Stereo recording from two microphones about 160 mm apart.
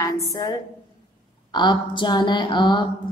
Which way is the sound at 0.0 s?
25° left (ahead or behind).